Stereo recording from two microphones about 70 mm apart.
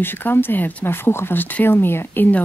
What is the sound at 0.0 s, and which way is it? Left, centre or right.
Speech, left.